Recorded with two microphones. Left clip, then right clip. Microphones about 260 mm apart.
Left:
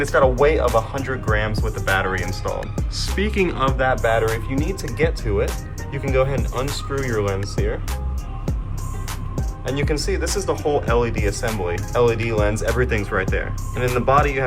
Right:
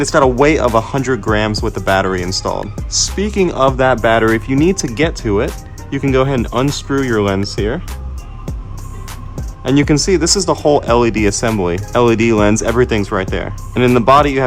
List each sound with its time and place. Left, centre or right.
0.0 s speech: right
9.7 s speech: right